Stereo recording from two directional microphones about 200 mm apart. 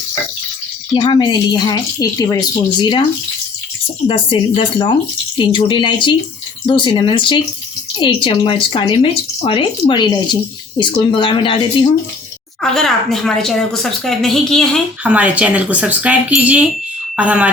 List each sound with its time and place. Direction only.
0.9 s speech: 25° left (ahead or behind)
4.0 s speech: 25° left (ahead or behind)
12.7 s a woman's voice: centre (ahead or behind)